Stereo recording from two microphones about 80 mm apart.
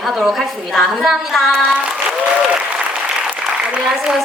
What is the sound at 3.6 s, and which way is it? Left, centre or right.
Speech, centre.